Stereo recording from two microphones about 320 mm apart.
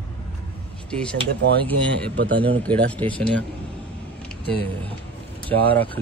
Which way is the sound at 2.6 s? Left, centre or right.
Centre.